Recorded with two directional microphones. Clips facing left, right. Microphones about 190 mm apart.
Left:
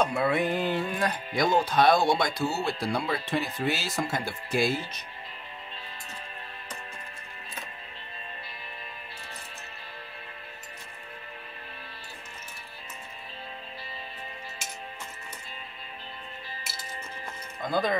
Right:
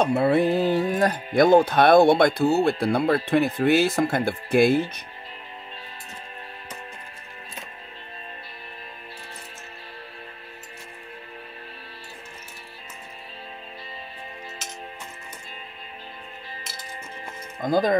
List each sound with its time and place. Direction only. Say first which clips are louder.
0.0 s speech: right 6 dB; 30° right (ahead or behind); by 4.9 s 55° right (ahead or behind)
17.6 s speech: right 6 dB; 45° right (ahead or behind)